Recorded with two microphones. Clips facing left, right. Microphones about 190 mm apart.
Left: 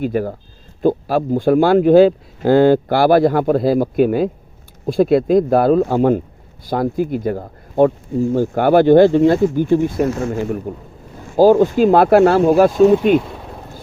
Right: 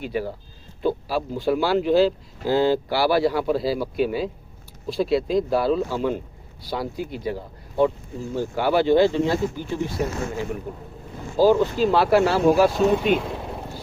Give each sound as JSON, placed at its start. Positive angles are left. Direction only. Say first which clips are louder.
{"t": 0.0, "sound": "speech", "louder": "left 8 dB", "side_deg": 50}
{"t": 12.7, "sound": "speech", "louder": "left 8 dB", "side_deg": 0}